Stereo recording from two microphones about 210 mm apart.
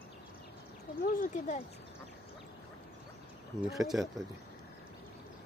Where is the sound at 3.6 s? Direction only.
Centre (ahead or behind).